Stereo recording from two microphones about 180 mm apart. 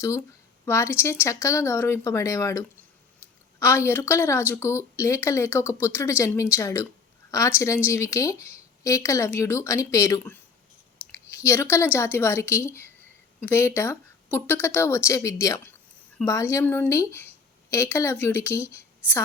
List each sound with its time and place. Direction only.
0.6 s a woman's voice: 15° left (ahead or behind)
11.4 s a woman's voice: 15° left (ahead or behind)